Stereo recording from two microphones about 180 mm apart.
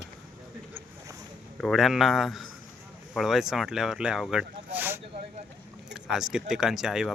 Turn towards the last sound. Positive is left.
turn(degrees=-5)  # may be behind; listen again after turning